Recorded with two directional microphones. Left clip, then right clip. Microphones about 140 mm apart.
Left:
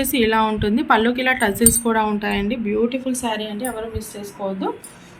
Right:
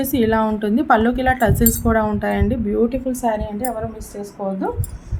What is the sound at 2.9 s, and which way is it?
Speech, 90° right.